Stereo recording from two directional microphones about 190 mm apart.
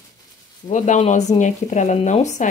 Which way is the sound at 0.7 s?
40° left (ahead or behind).